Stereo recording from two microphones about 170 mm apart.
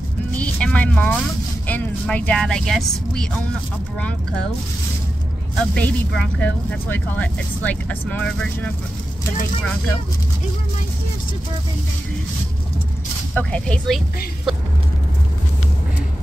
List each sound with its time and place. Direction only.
0.4 s vehicle: 5° left (ahead or behind)
1.7 s speech: 10° left (ahead or behind)
5.8 s speech: 5° left (ahead or behind)
13.3 s speech: 10° left (ahead or behind)